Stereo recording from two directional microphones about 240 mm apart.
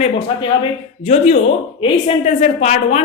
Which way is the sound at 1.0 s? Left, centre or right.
Left.